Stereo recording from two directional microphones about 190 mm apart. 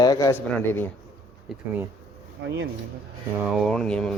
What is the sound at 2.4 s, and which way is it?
Speech, 75° right (ahead or behind).